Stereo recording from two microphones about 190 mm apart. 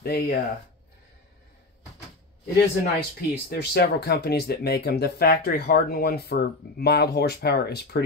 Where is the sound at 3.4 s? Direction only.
60° left (ahead or behind).